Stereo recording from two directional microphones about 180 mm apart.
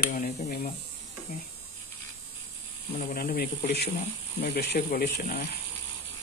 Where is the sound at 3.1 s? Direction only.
60° left (ahead or behind).